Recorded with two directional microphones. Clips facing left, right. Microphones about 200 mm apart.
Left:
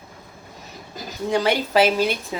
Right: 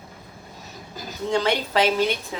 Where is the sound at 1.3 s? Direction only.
10° left (ahead or behind).